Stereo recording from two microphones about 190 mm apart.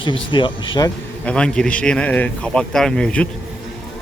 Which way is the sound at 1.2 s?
5° left (ahead or behind).